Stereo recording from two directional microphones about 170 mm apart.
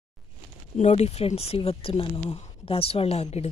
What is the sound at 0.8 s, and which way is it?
Speech, 40° left (ahead or behind).